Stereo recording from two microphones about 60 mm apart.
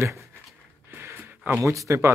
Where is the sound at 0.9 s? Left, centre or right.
Right.